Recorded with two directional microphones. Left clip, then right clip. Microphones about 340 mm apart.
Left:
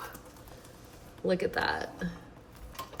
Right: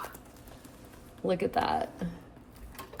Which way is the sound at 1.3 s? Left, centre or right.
Centre.